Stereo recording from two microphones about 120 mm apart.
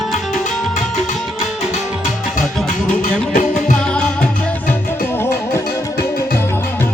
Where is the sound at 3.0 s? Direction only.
90° left.